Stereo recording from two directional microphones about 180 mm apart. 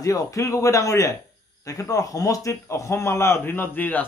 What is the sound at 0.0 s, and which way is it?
Speech, 20° left (ahead or behind).